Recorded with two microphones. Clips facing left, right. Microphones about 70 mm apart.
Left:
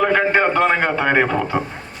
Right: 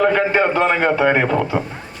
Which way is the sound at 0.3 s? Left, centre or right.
Centre.